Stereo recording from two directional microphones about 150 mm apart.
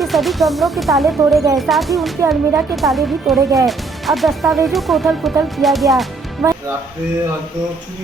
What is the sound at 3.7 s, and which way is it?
Speech, centre (ahead or behind).